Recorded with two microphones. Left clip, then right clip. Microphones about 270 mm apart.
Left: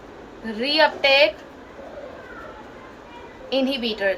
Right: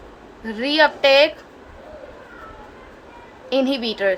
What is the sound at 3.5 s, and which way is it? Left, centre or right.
Speech, centre.